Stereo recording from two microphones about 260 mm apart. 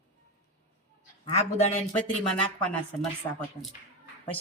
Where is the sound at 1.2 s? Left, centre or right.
Left.